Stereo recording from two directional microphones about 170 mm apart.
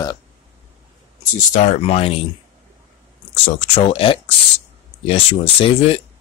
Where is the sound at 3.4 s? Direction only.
35° left (ahead or behind).